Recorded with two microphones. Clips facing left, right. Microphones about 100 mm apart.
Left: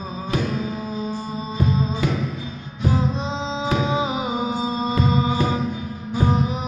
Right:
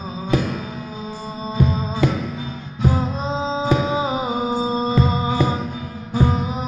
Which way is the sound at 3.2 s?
40° right (ahead or behind).